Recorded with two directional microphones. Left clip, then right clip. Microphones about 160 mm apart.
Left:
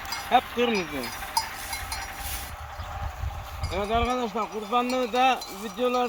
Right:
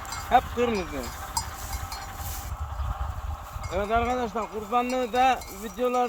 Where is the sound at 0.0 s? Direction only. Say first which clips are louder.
Left 2 dB; 80° left.